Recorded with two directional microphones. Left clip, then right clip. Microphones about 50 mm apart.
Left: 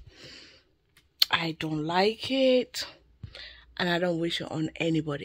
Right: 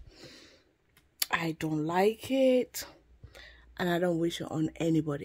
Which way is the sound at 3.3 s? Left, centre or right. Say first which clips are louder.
Left 7 dB; centre.